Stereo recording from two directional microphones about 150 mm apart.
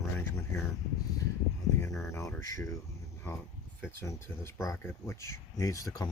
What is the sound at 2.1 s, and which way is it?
Speech, 20° left (ahead or behind).